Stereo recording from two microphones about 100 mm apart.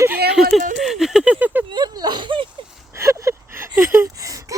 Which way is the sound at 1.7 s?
45° right (ahead or behind).